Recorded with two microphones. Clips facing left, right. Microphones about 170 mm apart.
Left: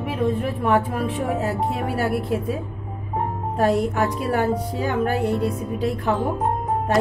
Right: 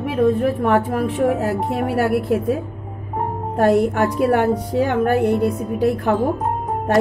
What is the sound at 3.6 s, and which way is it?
Speech, 60° right (ahead or behind).